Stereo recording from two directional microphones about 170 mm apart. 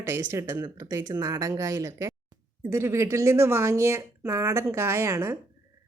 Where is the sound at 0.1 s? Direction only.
15° right (ahead or behind).